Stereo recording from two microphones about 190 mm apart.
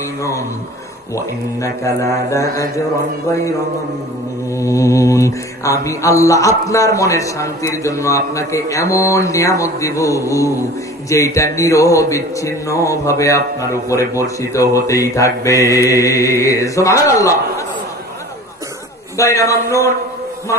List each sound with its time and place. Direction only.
0.2 s speech: 15° left (ahead or behind)
4.5 s speech: 15° left (ahead or behind)
19.1 s speech: 15° left (ahead or behind)